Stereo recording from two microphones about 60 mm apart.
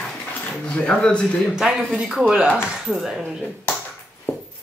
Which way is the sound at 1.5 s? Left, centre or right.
Centre.